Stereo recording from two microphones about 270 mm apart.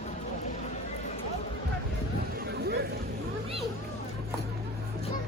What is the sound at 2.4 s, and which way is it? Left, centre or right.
Hubbub, right.